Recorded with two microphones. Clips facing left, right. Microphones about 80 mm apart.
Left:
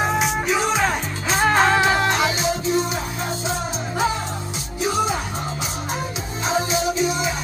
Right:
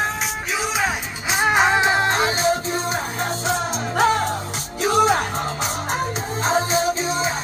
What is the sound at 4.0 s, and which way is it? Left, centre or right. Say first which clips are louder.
Music: right 5 dB; right.